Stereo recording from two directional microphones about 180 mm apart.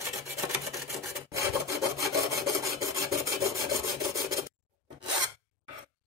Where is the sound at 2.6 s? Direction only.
15° right (ahead or behind).